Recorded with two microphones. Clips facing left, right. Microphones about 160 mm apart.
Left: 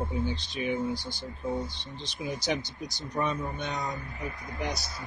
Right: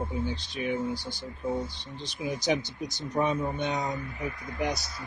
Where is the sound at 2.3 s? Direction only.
20° right (ahead or behind).